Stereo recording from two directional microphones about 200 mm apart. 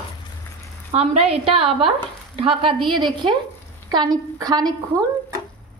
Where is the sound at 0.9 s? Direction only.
30° right (ahead or behind).